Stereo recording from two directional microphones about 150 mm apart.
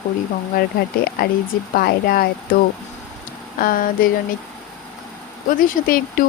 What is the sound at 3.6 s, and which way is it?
Speech, 75° left (ahead or behind).